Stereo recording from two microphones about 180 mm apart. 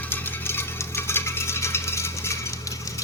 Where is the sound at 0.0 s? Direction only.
10° left (ahead or behind).